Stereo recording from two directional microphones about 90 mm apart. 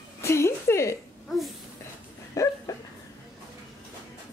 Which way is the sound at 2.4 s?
35° left (ahead or behind).